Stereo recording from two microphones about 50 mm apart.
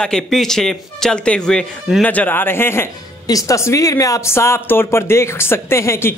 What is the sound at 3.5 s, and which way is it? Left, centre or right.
Speech, left.